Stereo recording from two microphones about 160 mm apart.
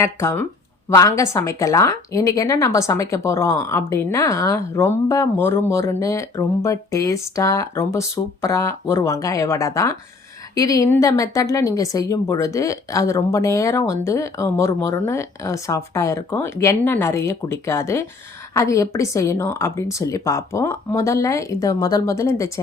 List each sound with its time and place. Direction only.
0.0 s speech: 15° left (ahead or behind)